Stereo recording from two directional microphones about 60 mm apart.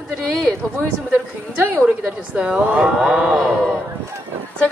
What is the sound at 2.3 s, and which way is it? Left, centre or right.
A woman's voice, right.